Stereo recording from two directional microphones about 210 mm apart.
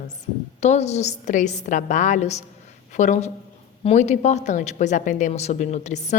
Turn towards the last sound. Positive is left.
turn(degrees=35)  # may be behind; listen again after turning